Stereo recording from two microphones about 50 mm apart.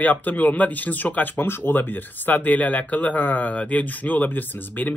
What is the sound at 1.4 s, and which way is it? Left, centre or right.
Speech, left.